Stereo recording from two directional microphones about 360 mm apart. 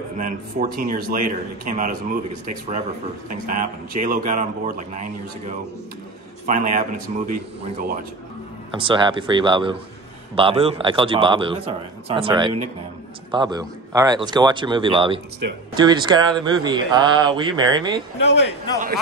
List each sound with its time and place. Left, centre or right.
0.2 s a man's voice: right
6.4 s a man's voice: right
8.7 s speech: centre
18.2 s a man's voice: left